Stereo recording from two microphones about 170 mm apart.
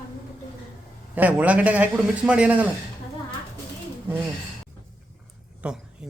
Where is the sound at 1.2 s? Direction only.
10° right (ahead or behind).